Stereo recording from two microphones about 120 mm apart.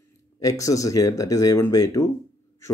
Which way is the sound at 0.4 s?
30° left (ahead or behind).